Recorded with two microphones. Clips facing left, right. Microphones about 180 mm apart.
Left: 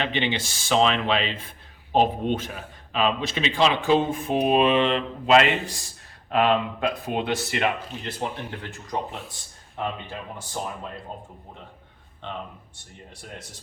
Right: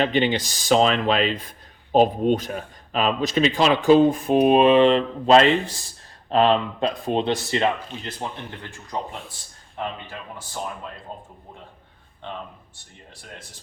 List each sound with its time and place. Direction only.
0.0 s speech: 40° right (ahead or behind)